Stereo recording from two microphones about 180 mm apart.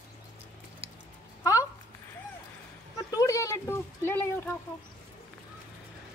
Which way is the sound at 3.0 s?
20° left (ahead or behind).